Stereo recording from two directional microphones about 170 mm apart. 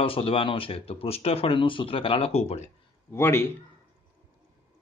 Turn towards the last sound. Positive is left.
turn(degrees=15)  # may be behind; listen again after turning